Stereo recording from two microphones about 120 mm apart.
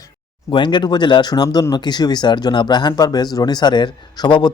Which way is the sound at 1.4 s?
25° left (ahead or behind).